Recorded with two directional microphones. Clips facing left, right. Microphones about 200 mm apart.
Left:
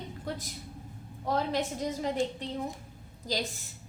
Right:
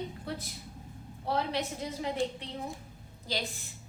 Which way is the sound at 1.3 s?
45° left (ahead or behind).